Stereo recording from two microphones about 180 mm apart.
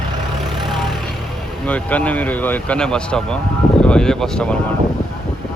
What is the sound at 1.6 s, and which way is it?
Speech, 10° left (ahead or behind).